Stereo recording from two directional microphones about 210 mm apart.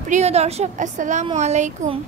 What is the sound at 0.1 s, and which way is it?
A woman's voice, 30° right (ahead or behind).